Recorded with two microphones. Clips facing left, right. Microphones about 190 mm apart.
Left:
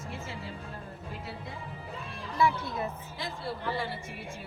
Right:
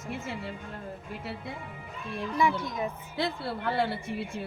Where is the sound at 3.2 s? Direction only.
65° right (ahead or behind).